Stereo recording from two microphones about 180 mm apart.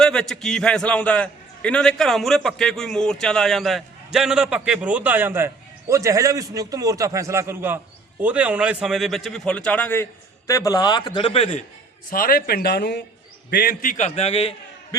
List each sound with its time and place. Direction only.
0.0 s a man's voice: 5° left (ahead or behind); by 11.6 s 35° left (ahead or behind)
12.1 s a man's voice: 55° left (ahead or behind); by 14.5 s 35° left (ahead or behind)